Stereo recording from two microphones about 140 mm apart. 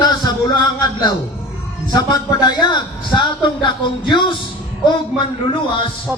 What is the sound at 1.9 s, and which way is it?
A man's voice, 30° left (ahead or behind).